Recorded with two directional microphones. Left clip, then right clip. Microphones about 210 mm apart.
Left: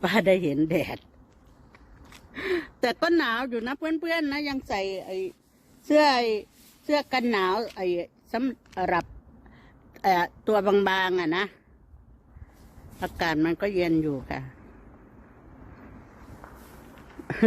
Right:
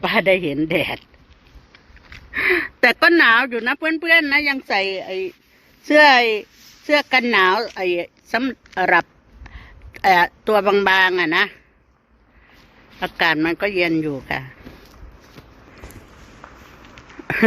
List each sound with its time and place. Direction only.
0.0 s a man's voice: 15° left (ahead or behind)
2.0 s speech: centre (ahead or behind)
9.9 s a man's voice: centre (ahead or behind)
13.1 s a man's voice: 5° left (ahead or behind)
16.4 s a sound: 25° left (ahead or behind)